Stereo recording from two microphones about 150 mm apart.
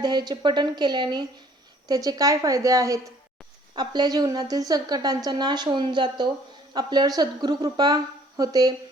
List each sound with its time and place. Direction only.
0.0 s a woman's voice: 30° right (ahead or behind)